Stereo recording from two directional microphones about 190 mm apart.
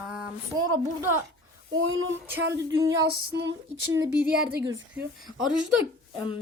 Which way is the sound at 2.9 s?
70° right (ahead or behind).